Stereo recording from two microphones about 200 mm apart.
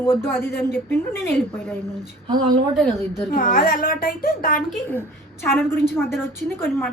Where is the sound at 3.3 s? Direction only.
40° left (ahead or behind).